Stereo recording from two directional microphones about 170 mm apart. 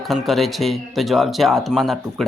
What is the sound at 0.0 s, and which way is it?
Speech, centre (ahead or behind).